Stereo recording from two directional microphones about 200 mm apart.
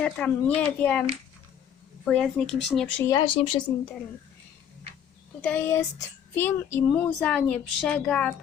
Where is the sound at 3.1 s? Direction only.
20° left (ahead or behind).